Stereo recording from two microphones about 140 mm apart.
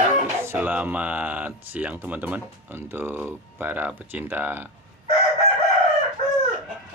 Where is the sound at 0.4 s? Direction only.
15° right (ahead or behind).